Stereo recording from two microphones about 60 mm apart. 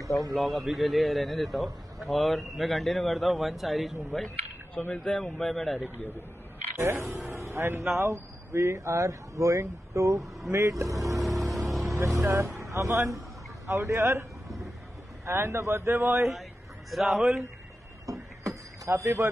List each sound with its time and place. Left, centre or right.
0.3 s a man's voice: centre
4.7 s speech: left
5.0 s a man's voice: centre
6.8 s a man's voice: right
11.1 s vehicle: centre
12.2 s speech: right
13.9 s speech: right
15.2 s a man's voice: right
16.2 s a man's voice: centre
18.0 s a sound: right
18.9 s speech: right